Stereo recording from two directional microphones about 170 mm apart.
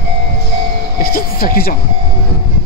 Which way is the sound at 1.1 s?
60° left (ahead or behind).